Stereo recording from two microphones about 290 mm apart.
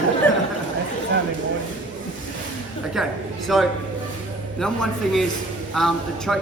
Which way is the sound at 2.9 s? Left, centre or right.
Centre.